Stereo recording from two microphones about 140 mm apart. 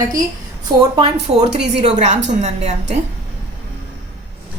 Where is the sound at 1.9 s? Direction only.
55° right (ahead or behind).